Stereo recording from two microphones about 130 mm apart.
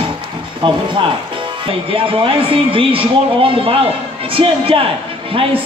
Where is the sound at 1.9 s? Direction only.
45° right (ahead or behind).